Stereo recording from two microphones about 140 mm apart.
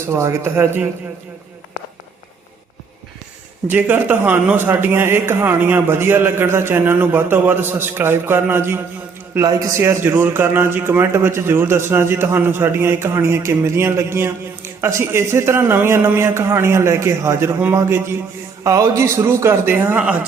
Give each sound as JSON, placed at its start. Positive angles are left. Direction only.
{"t": 0.1, "sound": "speech", "side_deg": -20}
{"t": 3.7, "sound": "a man's voice", "side_deg": -15}